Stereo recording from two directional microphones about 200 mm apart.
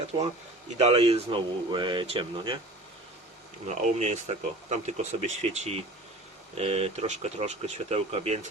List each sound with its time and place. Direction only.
0.8 s speech: 30° right (ahead or behind)
3.7 s speech: 35° right (ahead or behind)